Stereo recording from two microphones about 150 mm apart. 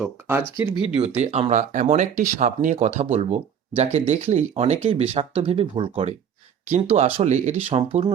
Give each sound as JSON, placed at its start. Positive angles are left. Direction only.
{"t": 0.0, "sound": "speech", "side_deg": -15}
{"t": 0.9, "sound": "speech", "side_deg": -45}